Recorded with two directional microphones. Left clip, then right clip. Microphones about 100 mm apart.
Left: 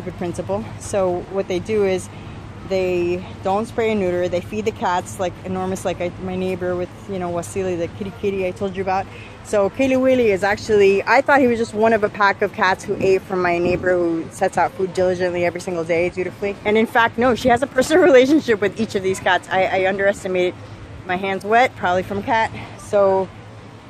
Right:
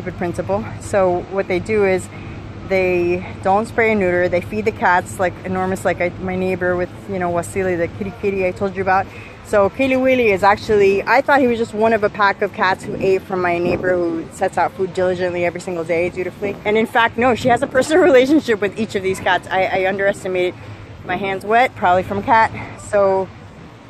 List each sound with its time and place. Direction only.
0.2 s speech: 35° left (ahead or behind)
4.7 s speech: 30° left (ahead or behind)
7.5 s speech: 40° left (ahead or behind)
12.4 s speech: 45° left (ahead or behind); by 21.6 s 30° left (ahead or behind)
21.6 s speech: 45° left (ahead or behind)
22.2 s speech: 30° left (ahead or behind)
22.8 s speech: 10° left (ahead or behind)